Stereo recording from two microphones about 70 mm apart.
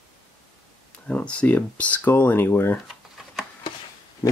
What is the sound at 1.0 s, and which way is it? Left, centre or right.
Speech, centre.